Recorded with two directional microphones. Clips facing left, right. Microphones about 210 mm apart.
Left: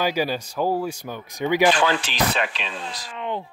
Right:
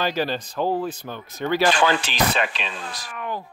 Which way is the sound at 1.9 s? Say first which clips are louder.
Right 1 dB; 50° right (ahead or behind).